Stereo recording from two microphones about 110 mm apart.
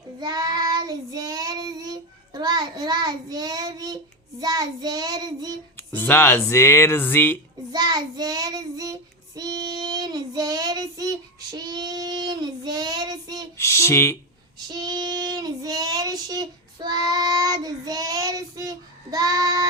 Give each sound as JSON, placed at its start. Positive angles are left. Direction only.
{"t": 0.2, "sound": "child singing", "side_deg": -40}
{"t": 5.7, "sound": "speech", "side_deg": 15}
{"t": 7.7, "sound": "child singing", "side_deg": -40}
{"t": 13.6, "sound": "a sound", "side_deg": 25}
{"t": 14.7, "sound": "child singing", "side_deg": -40}